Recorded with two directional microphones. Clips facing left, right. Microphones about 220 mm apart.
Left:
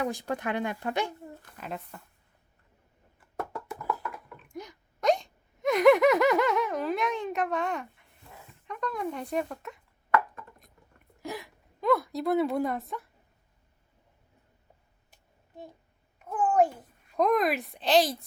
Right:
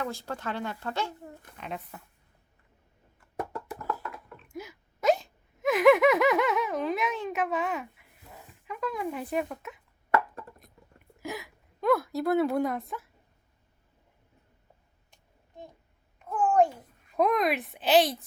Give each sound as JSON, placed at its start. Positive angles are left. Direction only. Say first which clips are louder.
{"t": 0.0, "sound": "speech", "louder": "left 3 dB", "side_deg": 15}
{"t": 1.5, "sound": "speech", "louder": "even", "side_deg": 0}
{"t": 4.5, "sound": "hiccup", "louder": "right 1 dB", "side_deg": -5}
{"t": 8.6, "sound": "speech", "louder": "even", "side_deg": -5}
{"t": 11.2, "sound": "a woman's voice", "louder": "even", "side_deg": 0}
{"t": 16.1, "sound": "babbling", "louder": "right 1 dB", "side_deg": 5}
{"t": 17.1, "sound": "speech", "louder": "even", "side_deg": 0}